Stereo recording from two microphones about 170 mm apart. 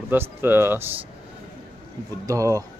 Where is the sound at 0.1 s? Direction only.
15° right (ahead or behind).